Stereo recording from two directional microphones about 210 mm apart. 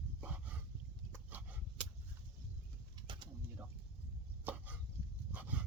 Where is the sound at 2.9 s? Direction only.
20° right (ahead or behind).